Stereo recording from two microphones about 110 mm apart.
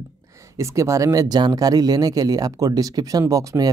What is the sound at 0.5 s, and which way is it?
Speech, 25° right (ahead or behind).